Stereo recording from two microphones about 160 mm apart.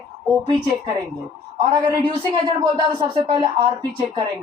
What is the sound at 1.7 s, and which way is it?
Speech, 30° right (ahead or behind).